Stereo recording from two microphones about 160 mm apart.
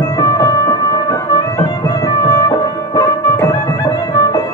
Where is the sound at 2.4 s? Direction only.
25° left (ahead or behind).